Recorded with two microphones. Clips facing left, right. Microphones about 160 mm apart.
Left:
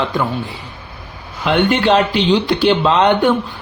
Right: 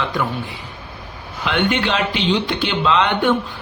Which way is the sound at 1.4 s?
40° left (ahead or behind).